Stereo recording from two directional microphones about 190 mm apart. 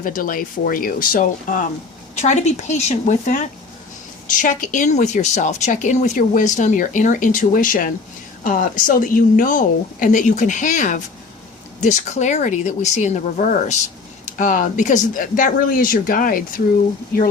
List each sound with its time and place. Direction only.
0.0 s speech: 45° left (ahead or behind)